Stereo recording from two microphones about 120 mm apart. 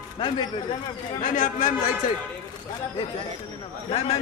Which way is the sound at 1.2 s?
90° left.